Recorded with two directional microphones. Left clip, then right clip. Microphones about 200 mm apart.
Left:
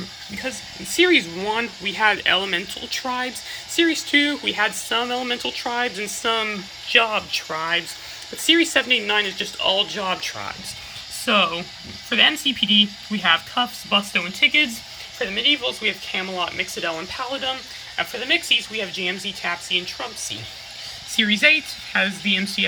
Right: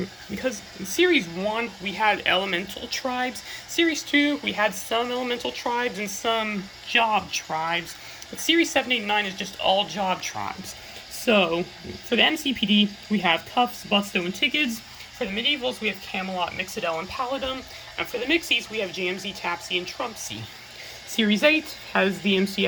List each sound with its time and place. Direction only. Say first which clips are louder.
0.9 s speech: left 4 dB; 5° right (ahead or behind)
12.4 s speech: left 5 dB; 5° right (ahead or behind)
13.2 s speech: left 3 dB; 30° left (ahead or behind)
14.1 s speech: left 6 dB; 5° right (ahead or behind)
21.2 s speech: left 4 dB; 10° right (ahead or behind)
21.9 s speech: left 2 dB; 25° left (ahead or behind)